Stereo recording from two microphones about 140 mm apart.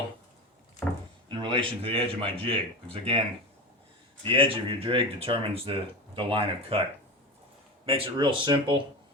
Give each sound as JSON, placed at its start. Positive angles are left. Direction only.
{"t": 1.3, "sound": "speech", "side_deg": -35}
{"t": 7.9, "sound": "speech", "side_deg": -40}